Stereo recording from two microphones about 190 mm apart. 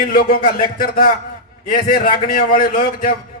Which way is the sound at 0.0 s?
50° left (ahead or behind).